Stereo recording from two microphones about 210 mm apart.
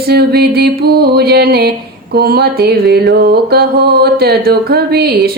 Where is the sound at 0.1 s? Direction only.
50° right (ahead or behind).